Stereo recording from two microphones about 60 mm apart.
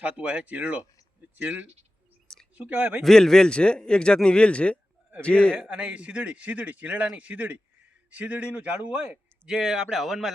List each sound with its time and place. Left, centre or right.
0.0 s a man's voice: centre
2.2 s a sound: centre
2.6 s a man's voice: right
3.0 s a man's voice: centre
5.5 s a man's voice: right
9.5 s speech: centre